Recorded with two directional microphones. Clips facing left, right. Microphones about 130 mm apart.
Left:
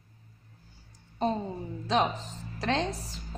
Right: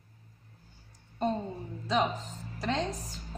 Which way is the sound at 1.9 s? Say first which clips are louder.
Left 2 dB; 85° left.